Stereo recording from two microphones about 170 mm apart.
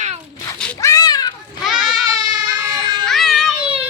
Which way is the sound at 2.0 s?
25° right (ahead or behind).